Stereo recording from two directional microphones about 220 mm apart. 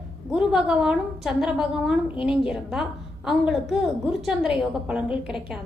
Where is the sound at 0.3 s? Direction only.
5° right (ahead or behind).